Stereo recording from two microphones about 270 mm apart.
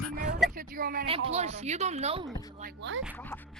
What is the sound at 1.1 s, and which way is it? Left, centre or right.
A woman's voice, right.